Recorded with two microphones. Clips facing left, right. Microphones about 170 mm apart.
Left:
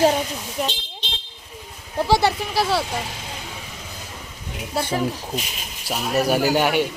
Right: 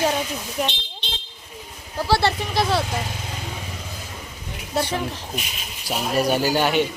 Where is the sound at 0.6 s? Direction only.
5° right (ahead or behind).